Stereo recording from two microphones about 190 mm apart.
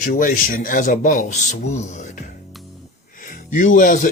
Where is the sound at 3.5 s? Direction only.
45° left (ahead or behind).